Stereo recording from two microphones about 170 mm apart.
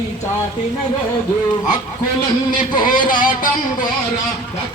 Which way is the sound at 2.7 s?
25° left (ahead or behind).